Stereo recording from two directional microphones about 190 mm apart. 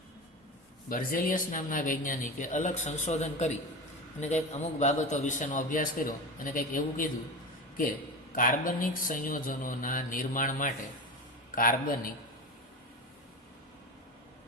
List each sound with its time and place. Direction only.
0.9 s a man's voice: 50° left (ahead or behind)
8.3 s speech: 45° left (ahead or behind)